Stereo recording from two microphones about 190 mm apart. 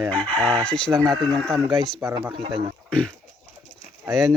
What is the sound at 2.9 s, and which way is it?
Speech, 5° left (ahead or behind).